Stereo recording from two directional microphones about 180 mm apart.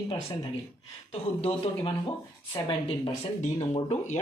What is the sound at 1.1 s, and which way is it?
Speech, 35° left (ahead or behind).